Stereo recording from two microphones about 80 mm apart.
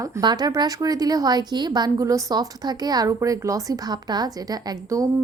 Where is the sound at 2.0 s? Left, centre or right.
Right.